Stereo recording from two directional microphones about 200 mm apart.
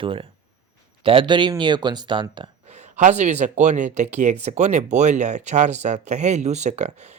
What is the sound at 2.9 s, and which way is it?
Speech, 35° right (ahead or behind).